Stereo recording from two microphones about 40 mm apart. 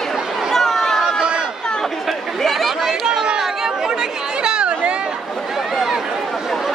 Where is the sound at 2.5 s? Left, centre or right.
Centre.